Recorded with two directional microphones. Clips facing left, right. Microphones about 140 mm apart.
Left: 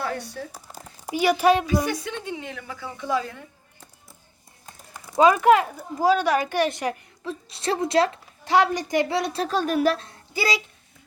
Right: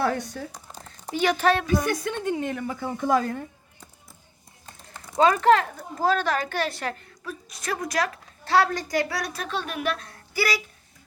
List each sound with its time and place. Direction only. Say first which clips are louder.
0.0 s a sound: right 4 dB; 50° right (ahead or behind)
0.5 s speech: left 1 dB; 10° left (ahead or behind)
1.8 s a woman's voice: right 2 dB; 50° right (ahead or behind)
4.6 s a woman's voice: left 1 dB; 10° left (ahead or behind); by 8.2 s 25° left (ahead or behind)
8.4 s a woman's voice: left 2 dB; 15° left (ahead or behind); by 10.1 s 35° left (ahead or behind)
10.1 s a sound: left 1 dB; 20° left (ahead or behind)